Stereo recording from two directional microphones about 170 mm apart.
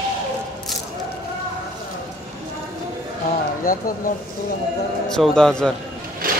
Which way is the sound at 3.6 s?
55° left (ahead or behind).